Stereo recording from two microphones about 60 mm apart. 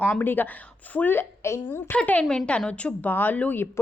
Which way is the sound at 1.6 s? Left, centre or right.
Left.